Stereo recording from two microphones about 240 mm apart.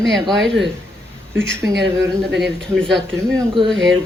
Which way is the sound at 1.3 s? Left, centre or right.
Right.